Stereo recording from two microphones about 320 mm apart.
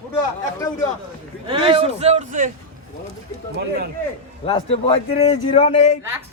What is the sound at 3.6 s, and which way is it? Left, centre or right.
Speech, right.